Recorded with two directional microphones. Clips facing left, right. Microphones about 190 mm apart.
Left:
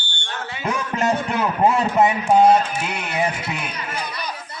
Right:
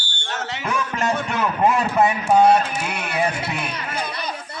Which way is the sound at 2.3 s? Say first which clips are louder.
Even; 10° left (ahead or behind).